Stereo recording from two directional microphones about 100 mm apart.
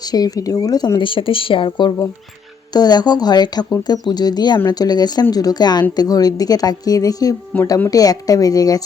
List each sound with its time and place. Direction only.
0.0 s speech: 40° left (ahead or behind)
0.9 s speech: 60° left (ahead or behind)
2.7 s speech: 45° left (ahead or behind)